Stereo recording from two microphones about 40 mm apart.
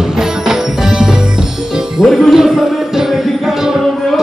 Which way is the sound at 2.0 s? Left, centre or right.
Centre.